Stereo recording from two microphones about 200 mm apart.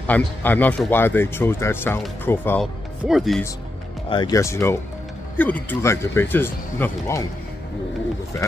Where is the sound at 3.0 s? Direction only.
Centre (ahead or behind).